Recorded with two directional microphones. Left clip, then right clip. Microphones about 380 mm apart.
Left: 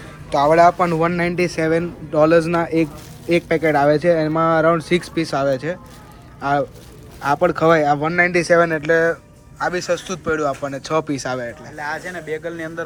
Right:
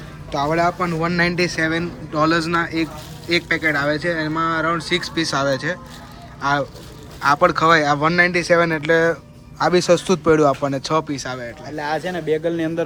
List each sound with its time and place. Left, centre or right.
0.3 s speech: centre
11.8 s speech: right